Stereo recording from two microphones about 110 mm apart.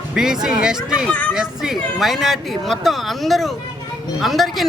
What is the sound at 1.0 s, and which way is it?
Speech, 15° left (ahead or behind).